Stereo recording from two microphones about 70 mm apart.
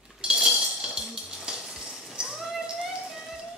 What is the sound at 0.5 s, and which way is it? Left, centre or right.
Clip-clop, centre.